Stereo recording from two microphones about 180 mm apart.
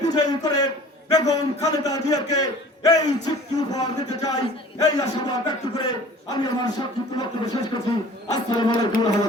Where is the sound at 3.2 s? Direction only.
20° left (ahead or behind).